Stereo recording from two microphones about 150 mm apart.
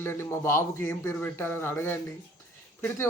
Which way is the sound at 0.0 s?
15° left (ahead or behind).